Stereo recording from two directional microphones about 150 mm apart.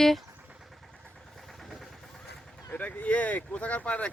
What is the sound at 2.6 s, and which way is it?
Speech, 10° left (ahead or behind).